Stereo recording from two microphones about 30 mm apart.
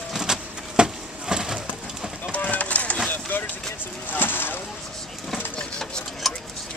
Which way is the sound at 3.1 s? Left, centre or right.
Left.